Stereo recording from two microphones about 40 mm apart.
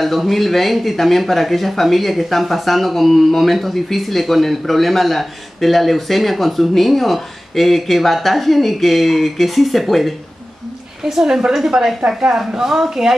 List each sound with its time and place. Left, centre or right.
0.0 s speech: centre
11.2 s a woman's voice: centre